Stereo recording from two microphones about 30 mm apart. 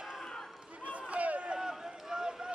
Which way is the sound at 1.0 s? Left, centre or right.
Right.